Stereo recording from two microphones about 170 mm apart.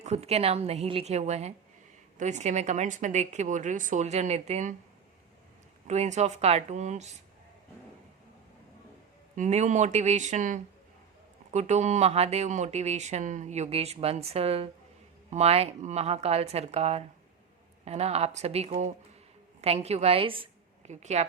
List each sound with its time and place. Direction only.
0.0 s a woman's voice: 40° right (ahead or behind)
5.9 s a woman's voice: 40° right (ahead or behind)
9.3 s a woman's voice: 45° right (ahead or behind)